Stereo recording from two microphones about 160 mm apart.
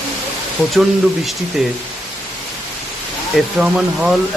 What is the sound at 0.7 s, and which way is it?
Speech, centre (ahead or behind).